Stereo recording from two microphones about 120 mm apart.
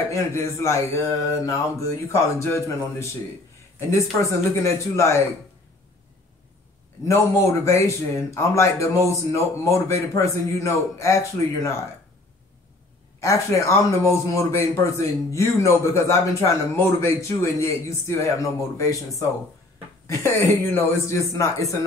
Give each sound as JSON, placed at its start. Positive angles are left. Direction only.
{"t": 0.1, "sound": "a man's voice", "side_deg": 25}
{"t": 7.1, "sound": "a man's voice", "side_deg": 25}
{"t": 13.2, "sound": "a man's voice", "side_deg": 25}
{"t": 20.2, "sound": "a man's voice", "side_deg": 20}